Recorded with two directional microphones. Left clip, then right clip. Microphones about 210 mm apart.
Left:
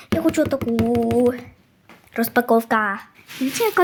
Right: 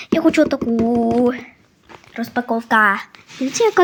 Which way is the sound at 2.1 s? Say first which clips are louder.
Left 4 dB; 25° left (ahead or behind).